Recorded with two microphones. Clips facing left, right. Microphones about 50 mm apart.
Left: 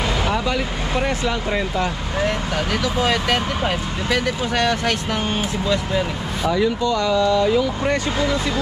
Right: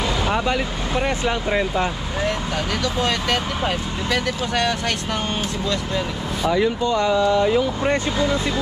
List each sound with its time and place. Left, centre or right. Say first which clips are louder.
2.2 s speech: left 1 dB; centre
6.5 s speech: even; right